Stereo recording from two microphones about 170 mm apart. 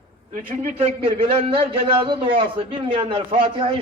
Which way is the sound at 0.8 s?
35° right (ahead or behind).